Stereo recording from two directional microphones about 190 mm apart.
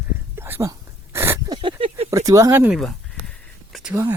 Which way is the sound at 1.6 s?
25° right (ahead or behind).